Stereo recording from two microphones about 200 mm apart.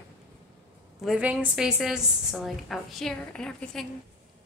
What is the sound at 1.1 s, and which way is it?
A woman's voice, 5° right (ahead or behind).